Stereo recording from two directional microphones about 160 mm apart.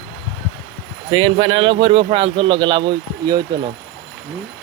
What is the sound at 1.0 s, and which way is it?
Speech, 35° right (ahead or behind).